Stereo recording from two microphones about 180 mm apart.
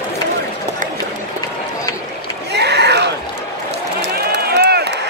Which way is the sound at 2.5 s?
65° right (ahead or behind).